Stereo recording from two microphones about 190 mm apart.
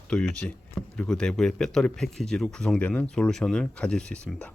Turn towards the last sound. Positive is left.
turn(degrees=5)  # may be behind; listen again after turning